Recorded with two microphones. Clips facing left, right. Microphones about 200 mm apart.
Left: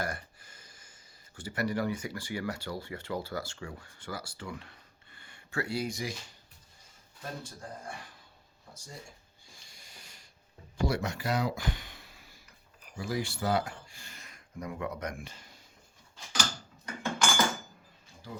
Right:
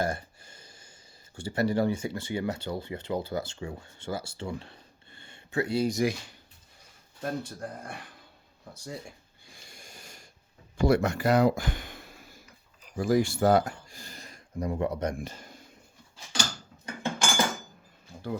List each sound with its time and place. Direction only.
0.0 s a sound: 25° right (ahead or behind)
1.4 s speech: 25° right (ahead or behind)
5.9 s speech: 50° right (ahead or behind)
7.2 s speech: 60° right (ahead or behind)
8.7 s a sound: 60° right (ahead or behind); by 10.2 s 45° right (ahead or behind)
10.8 s speech: 55° right (ahead or behind)
16.8 s cutlery: 30° right (ahead or behind)